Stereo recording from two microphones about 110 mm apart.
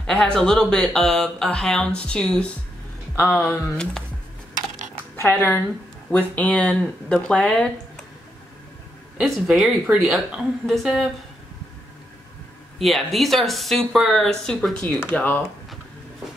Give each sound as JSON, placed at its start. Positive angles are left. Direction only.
{"t": 0.0, "sound": "speech", "side_deg": 5}
{"t": 3.2, "sound": "speech", "side_deg": 20}
{"t": 3.4, "sound": "speech", "side_deg": 10}
{"t": 5.1, "sound": "speech", "side_deg": 20}
{"t": 9.2, "sound": "speech", "side_deg": 0}
{"t": 12.7, "sound": "speech", "side_deg": 0}
{"t": 15.1, "sound": "speech", "side_deg": 15}